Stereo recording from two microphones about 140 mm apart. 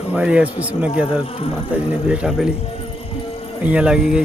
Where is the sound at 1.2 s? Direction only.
45° left (ahead or behind).